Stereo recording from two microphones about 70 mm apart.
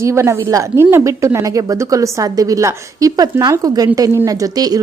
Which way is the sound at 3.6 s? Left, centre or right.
Right.